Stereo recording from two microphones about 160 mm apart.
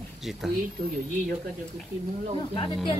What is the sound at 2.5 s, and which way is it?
Speech, 30° left (ahead or behind).